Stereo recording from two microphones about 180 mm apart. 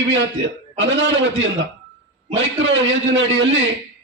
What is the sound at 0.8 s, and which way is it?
A man's voice, 90° right.